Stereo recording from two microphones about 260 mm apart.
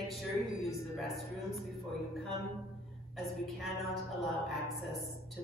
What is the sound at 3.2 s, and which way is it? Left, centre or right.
A man's voice, centre.